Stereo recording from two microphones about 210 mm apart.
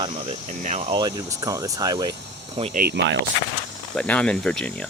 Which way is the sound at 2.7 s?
50° right (ahead or behind).